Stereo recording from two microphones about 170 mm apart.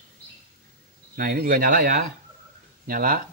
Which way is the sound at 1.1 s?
55° right (ahead or behind).